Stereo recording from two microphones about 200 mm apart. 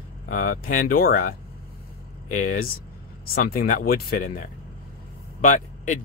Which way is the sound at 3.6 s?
45° left (ahead or behind).